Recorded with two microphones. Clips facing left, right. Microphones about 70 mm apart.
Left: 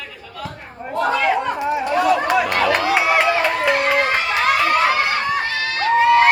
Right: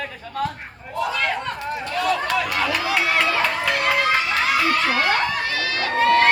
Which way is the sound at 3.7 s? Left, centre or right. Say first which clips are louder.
Left 3 dB; left.